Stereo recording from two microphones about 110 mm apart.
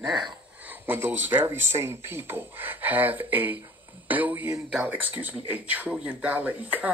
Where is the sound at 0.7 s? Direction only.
20° right (ahead or behind).